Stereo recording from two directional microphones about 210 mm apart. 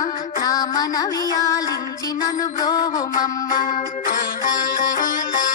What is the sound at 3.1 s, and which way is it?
Music, 40° left (ahead or behind).